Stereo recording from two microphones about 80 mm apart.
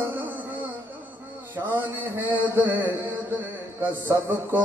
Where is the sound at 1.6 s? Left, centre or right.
Right.